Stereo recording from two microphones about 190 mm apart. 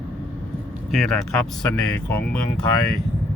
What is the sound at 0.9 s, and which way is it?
Speech, centre (ahead or behind).